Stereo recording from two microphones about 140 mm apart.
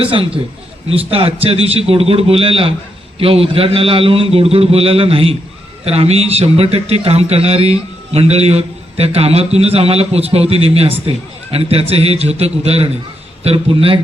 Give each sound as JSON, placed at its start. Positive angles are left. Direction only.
{"t": 0.0, "sound": "a man's voice", "side_deg": -40}